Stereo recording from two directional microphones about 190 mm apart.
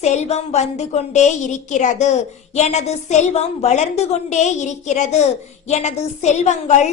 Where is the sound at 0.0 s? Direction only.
35° left (ahead or behind).